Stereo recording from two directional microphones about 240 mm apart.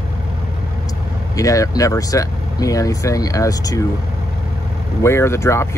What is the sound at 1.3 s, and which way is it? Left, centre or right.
Speech, centre.